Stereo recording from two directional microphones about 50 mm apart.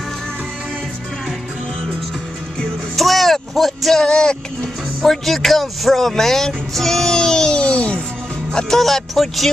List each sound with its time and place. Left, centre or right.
3.0 s music: centre
4.0 s music: centre
5.0 s music: centre; by 8.0 s left
8.5 s speech: centre